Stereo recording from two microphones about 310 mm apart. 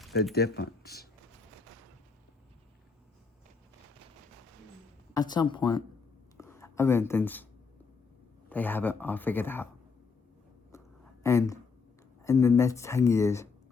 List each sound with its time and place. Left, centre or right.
0.3 s speech: left
5.1 s speech: centre
6.3 s a sound: centre
8.4 s speech: centre
10.7 s a sound: centre
12.2 s speech: centre